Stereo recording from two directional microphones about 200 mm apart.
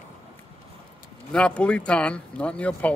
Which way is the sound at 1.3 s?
5° left (ahead or behind).